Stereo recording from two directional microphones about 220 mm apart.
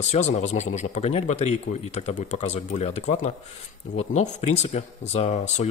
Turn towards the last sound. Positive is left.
turn(degrees=30)  # may be behind; listen again after turning